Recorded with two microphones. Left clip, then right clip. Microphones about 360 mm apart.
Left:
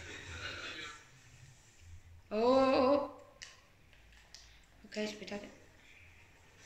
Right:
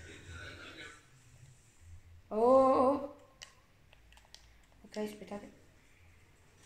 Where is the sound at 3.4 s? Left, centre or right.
Centre.